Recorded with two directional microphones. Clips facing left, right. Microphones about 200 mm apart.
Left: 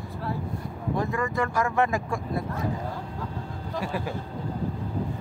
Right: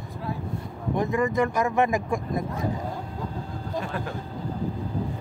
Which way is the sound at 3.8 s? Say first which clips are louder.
Left 2 dB; 10° left (ahead or behind).